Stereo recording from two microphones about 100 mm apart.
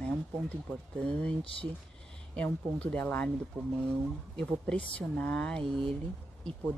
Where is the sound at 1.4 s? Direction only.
65° left (ahead or behind).